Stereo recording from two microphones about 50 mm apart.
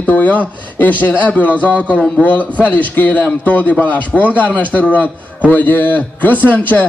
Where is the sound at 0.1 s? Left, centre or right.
Left.